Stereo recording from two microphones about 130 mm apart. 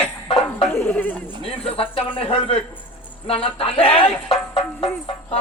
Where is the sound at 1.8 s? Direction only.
45° left (ahead or behind).